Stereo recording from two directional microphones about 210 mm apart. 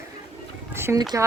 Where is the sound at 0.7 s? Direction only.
10° right (ahead or behind).